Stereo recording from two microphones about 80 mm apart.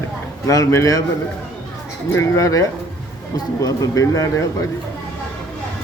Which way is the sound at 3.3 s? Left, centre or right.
Left.